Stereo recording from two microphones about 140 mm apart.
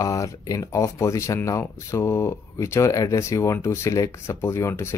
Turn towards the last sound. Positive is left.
turn(degrees=20)  # may be behind; listen again after turning